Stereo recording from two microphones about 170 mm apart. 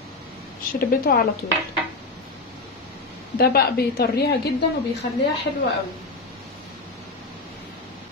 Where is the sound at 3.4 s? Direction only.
65° left (ahead or behind).